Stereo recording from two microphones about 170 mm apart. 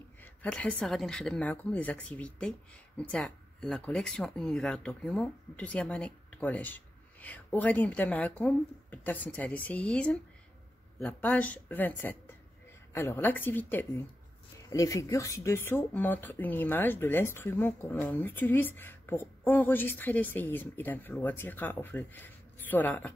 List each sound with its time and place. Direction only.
0.2 s speech: 10° left (ahead or behind)